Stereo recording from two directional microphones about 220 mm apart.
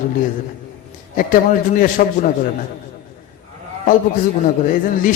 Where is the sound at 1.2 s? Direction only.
40° left (ahead or behind).